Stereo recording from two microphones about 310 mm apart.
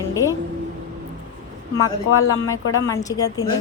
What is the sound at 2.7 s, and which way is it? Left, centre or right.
Speech, centre.